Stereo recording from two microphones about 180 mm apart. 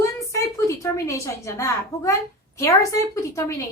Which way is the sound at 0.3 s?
15° left (ahead or behind).